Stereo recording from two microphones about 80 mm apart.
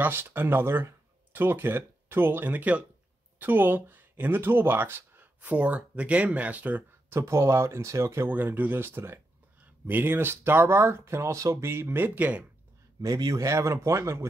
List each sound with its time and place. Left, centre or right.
0.0 s speech: right
7.2 s speech: right
8.3 s speech: right
13.0 s a man's voice: right
13.4 s speech: right